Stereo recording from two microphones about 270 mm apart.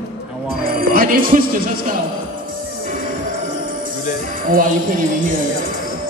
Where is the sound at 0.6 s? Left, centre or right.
Right.